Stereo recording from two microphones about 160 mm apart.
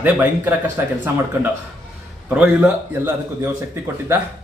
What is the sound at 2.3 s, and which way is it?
Speech, 10° right (ahead or behind).